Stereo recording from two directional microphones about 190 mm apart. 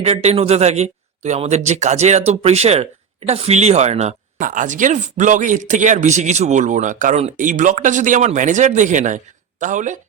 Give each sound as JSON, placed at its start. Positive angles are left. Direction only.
{"t": 0.0, "sound": "speech", "side_deg": -35}